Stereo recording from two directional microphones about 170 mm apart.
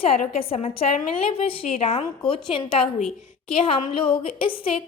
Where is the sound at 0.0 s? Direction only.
35° left (ahead or behind).